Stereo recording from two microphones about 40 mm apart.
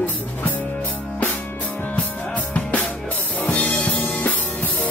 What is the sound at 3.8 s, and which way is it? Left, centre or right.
Music, left.